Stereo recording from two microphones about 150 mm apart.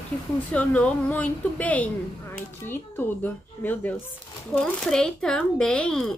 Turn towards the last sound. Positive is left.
turn(degrees=5)  # may be behind; listen again after turning